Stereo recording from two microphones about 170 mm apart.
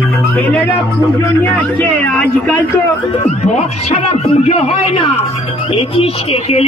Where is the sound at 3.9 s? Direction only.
40° left (ahead or behind).